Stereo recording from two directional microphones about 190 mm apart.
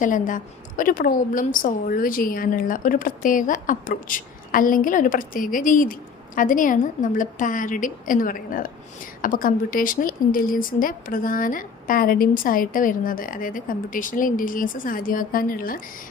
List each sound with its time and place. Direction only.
0.0 s speech: 45° left (ahead or behind)